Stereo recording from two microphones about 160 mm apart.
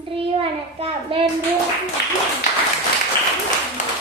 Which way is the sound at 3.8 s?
50° left (ahead or behind).